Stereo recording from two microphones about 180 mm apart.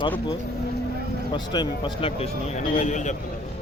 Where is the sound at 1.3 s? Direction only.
25° left (ahead or behind); by 3.1 s 40° left (ahead or behind).